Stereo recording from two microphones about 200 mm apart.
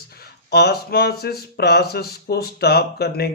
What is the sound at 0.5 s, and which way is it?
Speech, 55° left (ahead or behind).